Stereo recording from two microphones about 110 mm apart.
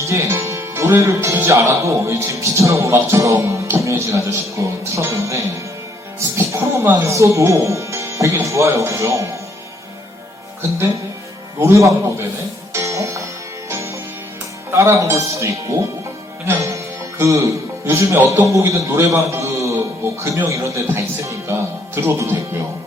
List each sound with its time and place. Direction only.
0.0 s speech: 25° right (ahead or behind)
10.6 s speech: 25° right (ahead or behind)
12.7 s music: 30° right (ahead or behind)
14.7 s speech: 25° right (ahead or behind)
16.5 s music: 25° right (ahead or behind)
17.8 s a man's voice: 20° right (ahead or behind)